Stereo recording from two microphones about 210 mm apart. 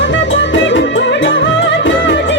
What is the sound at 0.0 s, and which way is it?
Music, 60° left (ahead or behind).